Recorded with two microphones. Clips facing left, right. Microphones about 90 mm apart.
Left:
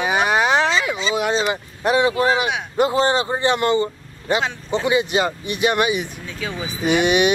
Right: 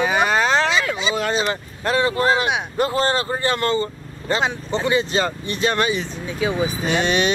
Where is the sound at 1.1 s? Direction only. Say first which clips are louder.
Left 1 dB; 15° right (ahead or behind).